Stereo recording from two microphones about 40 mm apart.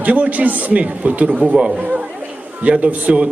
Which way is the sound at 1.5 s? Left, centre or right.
Right.